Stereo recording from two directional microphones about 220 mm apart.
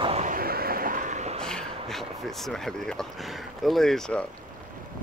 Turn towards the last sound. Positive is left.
turn(degrees=0)  # may be behind; listen again after turning